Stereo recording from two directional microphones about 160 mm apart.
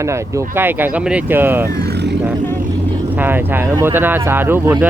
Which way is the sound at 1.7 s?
85° right.